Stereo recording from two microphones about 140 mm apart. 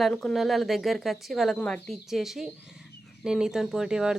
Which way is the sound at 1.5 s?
10° left (ahead or behind).